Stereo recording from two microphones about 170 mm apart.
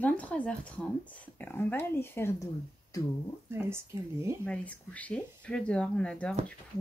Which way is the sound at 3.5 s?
15° right (ahead or behind).